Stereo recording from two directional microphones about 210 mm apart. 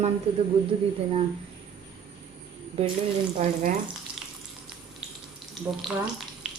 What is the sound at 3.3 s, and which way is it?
Speech, 35° right (ahead or behind).